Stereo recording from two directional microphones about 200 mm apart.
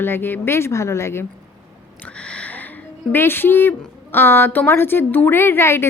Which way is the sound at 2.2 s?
5° left (ahead or behind).